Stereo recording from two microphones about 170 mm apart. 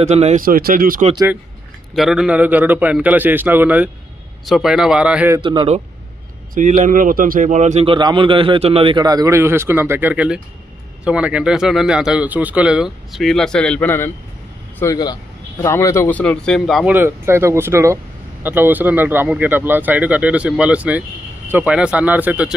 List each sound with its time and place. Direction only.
0.0 s a man's voice: 40° right (ahead or behind)
0.5 s speech: 60° right (ahead or behind)
1.1 s speech: 15° right (ahead or behind)
2.0 s speech: centre (ahead or behind)
5.4 s speech: 30° right (ahead or behind)
6.5 s a man's voice: 50° right (ahead or behind); by 16.9 s centre (ahead or behind)
16.9 s speech: 15° right (ahead or behind)